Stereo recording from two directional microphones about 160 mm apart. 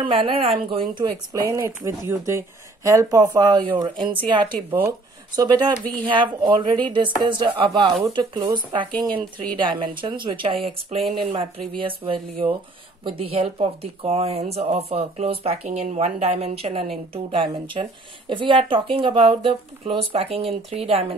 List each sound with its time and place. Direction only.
0.0 s a woman's voice: 35° right (ahead or behind)
4.6 s speech: 10° right (ahead or behind)
5.3 s a woman's voice: 25° right (ahead or behind)